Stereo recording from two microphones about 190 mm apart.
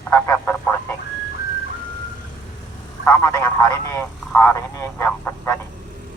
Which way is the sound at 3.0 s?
15° left (ahead or behind).